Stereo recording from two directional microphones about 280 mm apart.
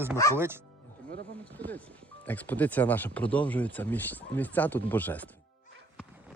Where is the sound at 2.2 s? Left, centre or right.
Centre.